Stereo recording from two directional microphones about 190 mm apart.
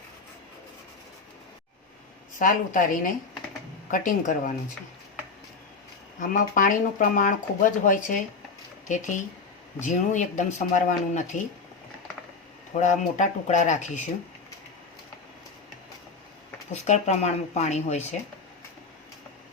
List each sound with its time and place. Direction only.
2.4 s speech: 45° left (ahead or behind)
6.1 s speech: 45° left (ahead or behind)
12.8 s speech: 40° left (ahead or behind)
16.7 s speech: 35° left (ahead or behind)